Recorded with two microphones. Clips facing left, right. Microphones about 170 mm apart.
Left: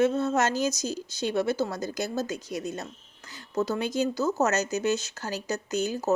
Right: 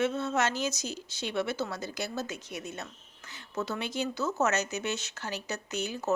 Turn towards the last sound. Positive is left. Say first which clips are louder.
# left 6 dB
turn(degrees=40)  # may be behind; listen again after turning